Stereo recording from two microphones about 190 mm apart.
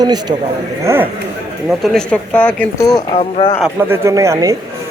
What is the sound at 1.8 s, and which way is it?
A woman's voice, centre (ahead or behind).